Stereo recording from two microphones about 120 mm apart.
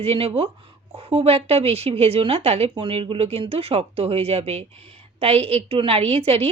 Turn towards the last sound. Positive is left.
turn(degrees=-55)  # may be behind; listen again after turning